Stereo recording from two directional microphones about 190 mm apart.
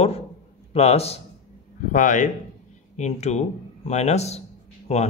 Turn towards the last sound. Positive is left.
turn(degrees=30)  # may be behind; listen again after turning